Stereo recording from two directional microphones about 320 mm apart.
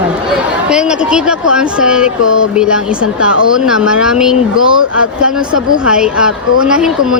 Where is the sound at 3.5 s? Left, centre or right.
Centre.